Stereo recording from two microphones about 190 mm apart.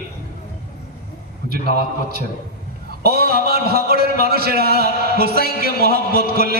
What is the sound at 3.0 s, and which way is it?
A man's voice, 55° right (ahead or behind).